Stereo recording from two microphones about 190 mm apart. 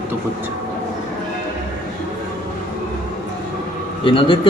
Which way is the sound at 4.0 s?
25° left (ahead or behind).